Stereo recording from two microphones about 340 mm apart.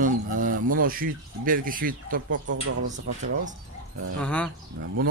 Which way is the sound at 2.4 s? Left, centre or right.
Right.